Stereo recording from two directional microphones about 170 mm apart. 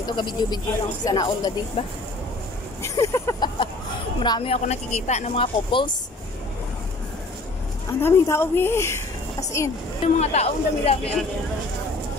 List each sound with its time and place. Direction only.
0.0 s speech: 25° left (ahead or behind)
1.8 s speech: 35° left (ahead or behind)
2.8 s speech: 15° left (ahead or behind)
8.0 s speech: 15° left (ahead or behind)
10.0 s speech: 40° left (ahead or behind)